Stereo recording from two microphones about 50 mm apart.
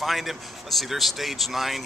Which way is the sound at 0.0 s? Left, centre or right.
Centre.